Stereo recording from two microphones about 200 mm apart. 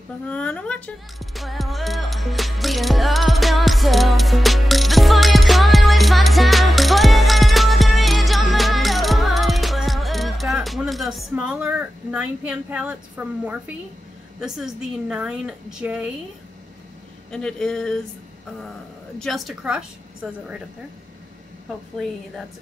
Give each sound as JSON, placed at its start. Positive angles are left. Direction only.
{"t": 0.3, "sound": "music", "side_deg": 5}
{"t": 13.2, "sound": "a woman's voice", "side_deg": -10}
{"t": 14.4, "sound": "a woman's voice", "side_deg": -5}
{"t": 17.3, "sound": "a woman's voice", "side_deg": 5}
{"t": 19.1, "sound": "a woman's voice", "side_deg": 0}
{"t": 21.9, "sound": "a woman's voice", "side_deg": 0}